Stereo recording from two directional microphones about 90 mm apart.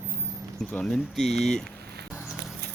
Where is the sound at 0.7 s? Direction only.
10° left (ahead or behind).